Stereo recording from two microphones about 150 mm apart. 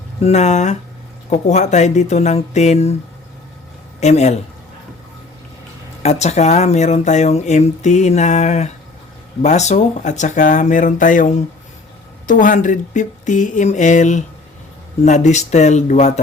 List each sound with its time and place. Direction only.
0.2 s speech: 45° left (ahead or behind)
4.0 s speech: 50° left (ahead or behind)
6.0 s speech: 45° left (ahead or behind)